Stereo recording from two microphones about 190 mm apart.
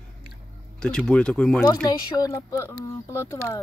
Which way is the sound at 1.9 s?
20° left (ahead or behind).